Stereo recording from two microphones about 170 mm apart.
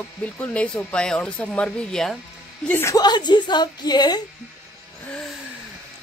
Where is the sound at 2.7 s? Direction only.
15° left (ahead or behind).